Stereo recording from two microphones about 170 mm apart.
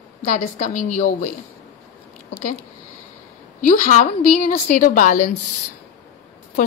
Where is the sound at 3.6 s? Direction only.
45° left (ahead or behind).